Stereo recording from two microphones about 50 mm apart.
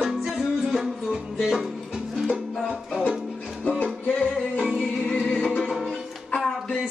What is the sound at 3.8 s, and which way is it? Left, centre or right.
Music, left.